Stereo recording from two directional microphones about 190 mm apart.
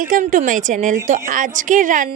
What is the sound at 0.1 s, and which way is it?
A woman's voice, 40° right (ahead or behind).